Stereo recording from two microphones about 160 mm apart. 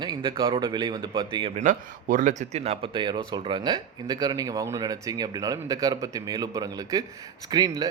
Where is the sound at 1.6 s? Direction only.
55° right (ahead or behind).